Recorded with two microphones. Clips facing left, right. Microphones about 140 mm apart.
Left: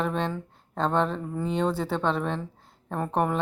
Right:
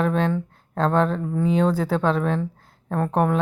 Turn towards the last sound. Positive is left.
turn(degrees=0)  # may be behind; listen again after turning